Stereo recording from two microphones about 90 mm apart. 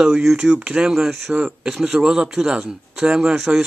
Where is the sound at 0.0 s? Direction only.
5° right (ahead or behind).